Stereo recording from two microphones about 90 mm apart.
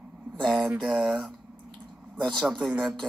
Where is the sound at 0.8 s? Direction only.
Centre (ahead or behind).